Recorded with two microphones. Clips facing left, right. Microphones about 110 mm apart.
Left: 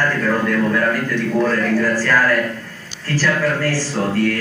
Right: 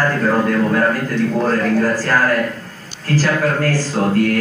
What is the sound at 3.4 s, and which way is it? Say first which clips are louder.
Speech: right 2 dB; 50° right (ahead or behind).